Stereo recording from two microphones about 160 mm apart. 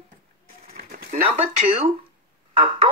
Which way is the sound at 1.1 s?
35° right (ahead or behind).